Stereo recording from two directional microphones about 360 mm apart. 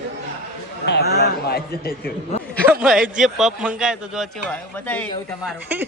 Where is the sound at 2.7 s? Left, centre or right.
Centre.